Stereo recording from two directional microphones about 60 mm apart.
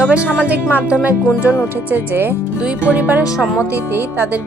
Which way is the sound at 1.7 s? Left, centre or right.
Right.